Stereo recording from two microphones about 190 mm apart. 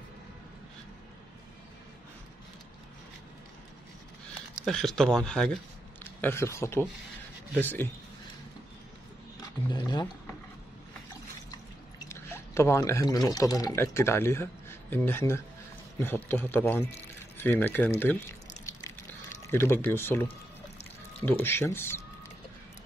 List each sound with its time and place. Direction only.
4.6 s speech: centre (ahead or behind)
6.2 s speech: 15° left (ahead or behind)
9.7 s a sound: 20° left (ahead or behind)
12.0 s speech: 15° left (ahead or behind)
19.4 s speech: 15° left (ahead or behind)